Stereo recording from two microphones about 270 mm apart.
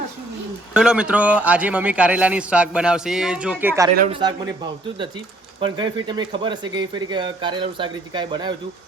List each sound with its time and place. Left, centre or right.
0.7 s a man's voice: centre
5.5 s speech: centre